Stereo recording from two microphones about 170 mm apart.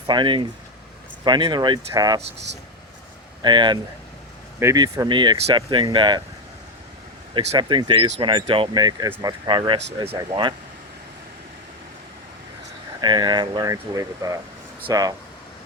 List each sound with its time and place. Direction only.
0.1 s speech: 25° right (ahead or behind)
3.4 s speech: 25° right (ahead or behind)
7.3 s speech: 30° right (ahead or behind)
13.0 s speech: 25° right (ahead or behind)